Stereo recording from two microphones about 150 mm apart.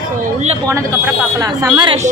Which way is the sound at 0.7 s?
20° right (ahead or behind).